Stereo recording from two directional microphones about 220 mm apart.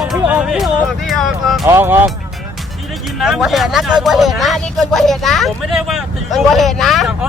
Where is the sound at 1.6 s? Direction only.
10° right (ahead or behind).